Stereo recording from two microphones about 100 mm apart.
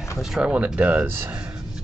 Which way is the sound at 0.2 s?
5° right (ahead or behind).